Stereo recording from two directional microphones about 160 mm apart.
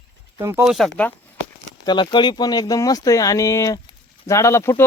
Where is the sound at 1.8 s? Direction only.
25° left (ahead or behind).